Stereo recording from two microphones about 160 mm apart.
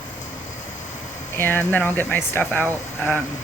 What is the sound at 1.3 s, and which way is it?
Speech, 15° left (ahead or behind).